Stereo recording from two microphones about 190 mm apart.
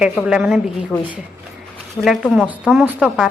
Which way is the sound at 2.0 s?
Centre (ahead or behind).